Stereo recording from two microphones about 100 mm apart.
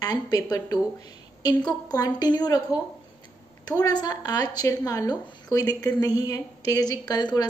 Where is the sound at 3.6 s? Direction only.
40° left (ahead or behind).